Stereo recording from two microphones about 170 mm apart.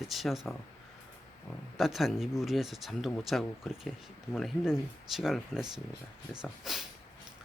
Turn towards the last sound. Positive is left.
turn(degrees=-5)  # may be behind; listen again after turning